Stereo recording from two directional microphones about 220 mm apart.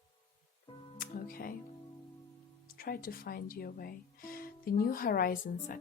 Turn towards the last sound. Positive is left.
turn(degrees=40)  # may be behind; listen again after turning